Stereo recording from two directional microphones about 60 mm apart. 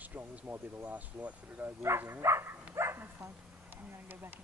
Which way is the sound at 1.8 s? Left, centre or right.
Right.